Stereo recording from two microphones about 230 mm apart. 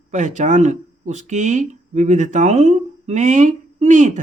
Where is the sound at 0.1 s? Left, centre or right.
Right.